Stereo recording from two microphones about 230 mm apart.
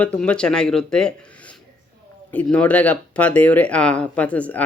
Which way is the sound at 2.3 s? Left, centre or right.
Centre.